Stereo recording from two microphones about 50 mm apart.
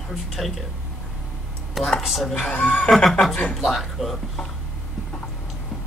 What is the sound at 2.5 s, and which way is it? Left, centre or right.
Speech, left.